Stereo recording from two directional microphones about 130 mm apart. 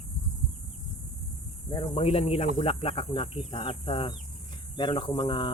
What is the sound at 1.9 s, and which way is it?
Speech, 50° left (ahead or behind).